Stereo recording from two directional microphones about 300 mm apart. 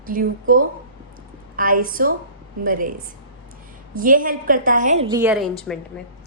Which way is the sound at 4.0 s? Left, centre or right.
Right.